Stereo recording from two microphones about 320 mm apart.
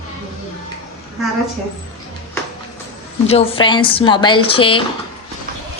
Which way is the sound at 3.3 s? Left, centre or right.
Centre.